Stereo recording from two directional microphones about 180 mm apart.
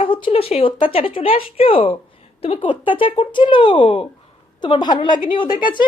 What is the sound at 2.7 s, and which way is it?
Speech, 10° right (ahead or behind).